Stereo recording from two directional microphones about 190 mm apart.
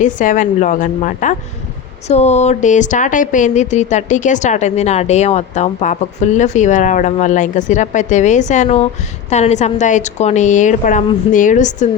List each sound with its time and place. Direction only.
0.0 s a woman's voice: 45° left (ahead or behind)